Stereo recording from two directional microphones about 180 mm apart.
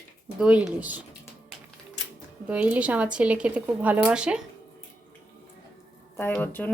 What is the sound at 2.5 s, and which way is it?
Speech, 10° right (ahead or behind).